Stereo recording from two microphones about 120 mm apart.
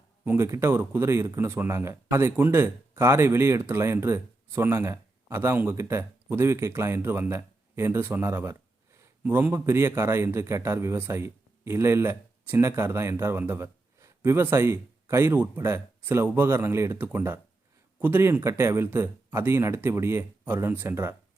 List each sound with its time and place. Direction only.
0.3 s a man's voice: 20° right (ahead or behind)